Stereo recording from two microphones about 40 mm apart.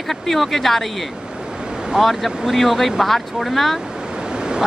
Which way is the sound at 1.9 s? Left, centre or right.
Centre.